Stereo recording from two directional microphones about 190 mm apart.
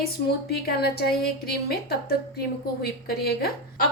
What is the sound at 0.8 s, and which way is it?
A woman's voice, 55° left (ahead or behind).